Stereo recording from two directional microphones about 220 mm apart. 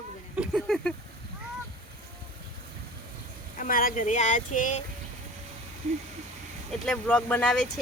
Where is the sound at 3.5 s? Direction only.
40° left (ahead or behind).